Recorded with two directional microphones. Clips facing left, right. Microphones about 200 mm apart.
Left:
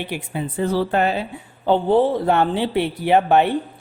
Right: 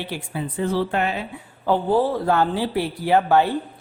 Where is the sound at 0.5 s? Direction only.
35° left (ahead or behind).